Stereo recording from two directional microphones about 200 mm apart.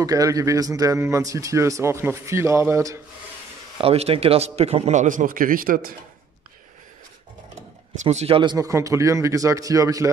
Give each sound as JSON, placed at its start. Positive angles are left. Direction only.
{"t": 0.0, "sound": "speech", "side_deg": -15}
{"t": 3.7, "sound": "a man's voice", "side_deg": -30}
{"t": 8.0, "sound": "speech", "side_deg": -35}